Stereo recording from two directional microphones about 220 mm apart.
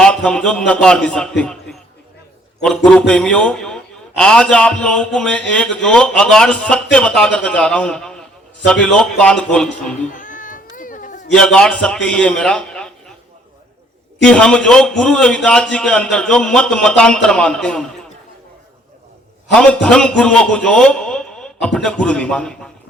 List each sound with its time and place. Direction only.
0.0 s a man's voice: 5° left (ahead or behind)
2.6 s a man's voice: 5° left (ahead or behind)
10.1 s cat: 35° left (ahead or behind)
11.3 s a man's voice: 5° left (ahead or behind)
14.2 s a man's voice: 5° left (ahead or behind)
19.5 s a man's voice: 5° left (ahead or behind)